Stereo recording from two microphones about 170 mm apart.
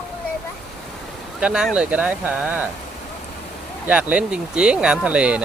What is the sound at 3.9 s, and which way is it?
Speech, 5° right (ahead or behind).